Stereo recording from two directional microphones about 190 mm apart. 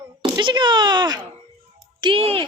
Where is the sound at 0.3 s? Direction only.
25° right (ahead or behind).